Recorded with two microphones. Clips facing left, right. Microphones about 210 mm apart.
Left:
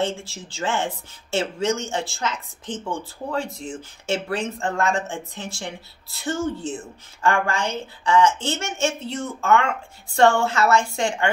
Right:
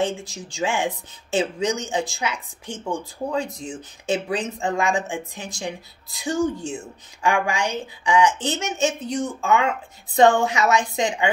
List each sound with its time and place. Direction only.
0.0 s speech: 15° right (ahead or behind)